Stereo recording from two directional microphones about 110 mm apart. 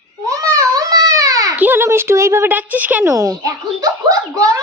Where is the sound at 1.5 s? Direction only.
15° right (ahead or behind).